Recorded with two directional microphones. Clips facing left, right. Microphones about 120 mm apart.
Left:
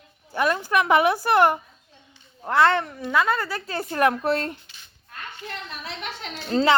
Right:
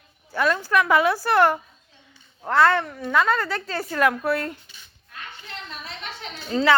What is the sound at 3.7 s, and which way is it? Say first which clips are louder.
Speech: left 1 dB; 20° left (ahead or behind).